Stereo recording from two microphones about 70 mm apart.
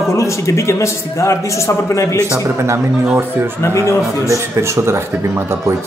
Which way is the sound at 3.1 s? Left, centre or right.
Right.